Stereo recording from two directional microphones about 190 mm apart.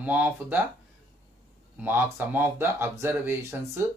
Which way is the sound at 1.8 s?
10° right (ahead or behind).